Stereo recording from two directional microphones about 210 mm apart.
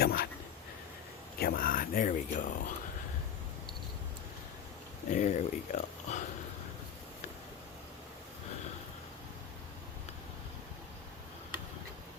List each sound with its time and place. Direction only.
0.0 s a sound: 45° left (ahead or behind)
1.4 s speech: 45° left (ahead or behind)
5.1 s speech: 35° left (ahead or behind)